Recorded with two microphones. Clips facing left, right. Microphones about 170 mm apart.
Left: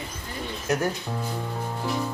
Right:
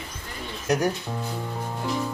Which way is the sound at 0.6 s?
15° right (ahead or behind).